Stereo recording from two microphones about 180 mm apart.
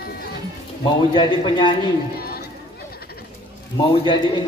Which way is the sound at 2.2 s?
60° left (ahead or behind).